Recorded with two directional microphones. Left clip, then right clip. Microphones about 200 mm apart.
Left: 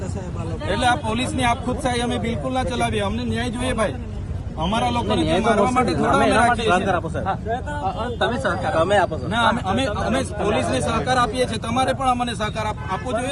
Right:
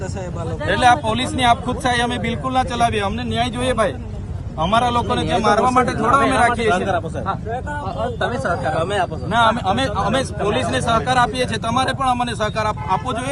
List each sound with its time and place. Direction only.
0.7 s a man's voice: centre (ahead or behind)
7.9 s a man's voice: 30° left (ahead or behind)
9.3 s a man's voice: centre (ahead or behind)